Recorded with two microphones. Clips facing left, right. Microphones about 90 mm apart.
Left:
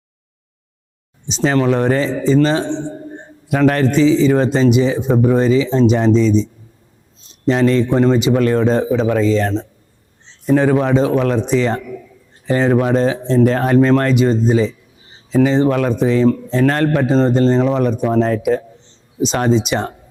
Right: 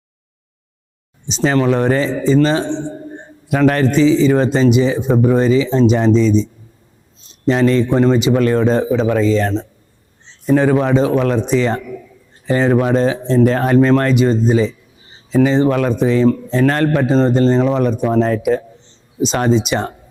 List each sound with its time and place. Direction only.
1.3 s a man's voice: 15° right (ahead or behind)
2.7 s a sound: 30° right (ahead or behind)
3.5 s a man's voice: 20° right (ahead or behind)
7.4 s a man's voice: 15° right (ahead or behind)
11.4 s a man's voice: 10° right (ahead or behind)
11.7 s a man's voice: 25° right (ahead or behind)